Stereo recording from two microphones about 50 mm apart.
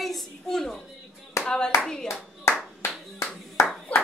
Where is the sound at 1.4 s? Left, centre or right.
Left.